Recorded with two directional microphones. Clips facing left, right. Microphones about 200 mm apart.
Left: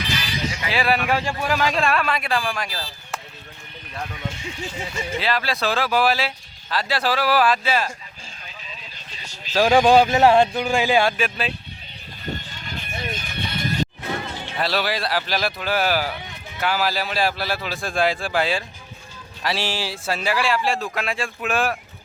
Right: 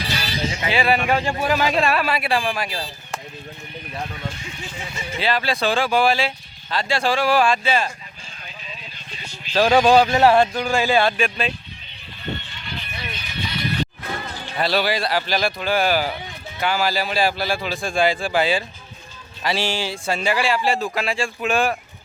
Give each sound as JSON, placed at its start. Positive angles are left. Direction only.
{"t": 0.0, "sound": "music", "side_deg": -35}
{"t": 0.7, "sound": "speech", "side_deg": 0}
{"t": 4.1, "sound": "speech", "side_deg": 20}
{"t": 5.1, "sound": "speech", "side_deg": 0}
{"t": 9.5, "sound": "speech", "side_deg": 5}
{"t": 12.2, "sound": "music", "side_deg": 40}
{"t": 14.0, "sound": "a sound", "side_deg": 25}
{"t": 14.5, "sound": "speech", "side_deg": 0}